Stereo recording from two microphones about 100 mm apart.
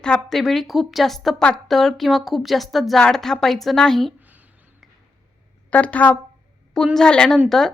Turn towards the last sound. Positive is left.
turn(degrees=10)  # may be behind; listen again after turning